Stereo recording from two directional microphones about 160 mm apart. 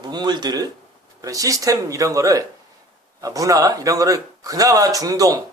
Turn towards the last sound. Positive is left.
turn(degrees=-20)  # may be behind; listen again after turning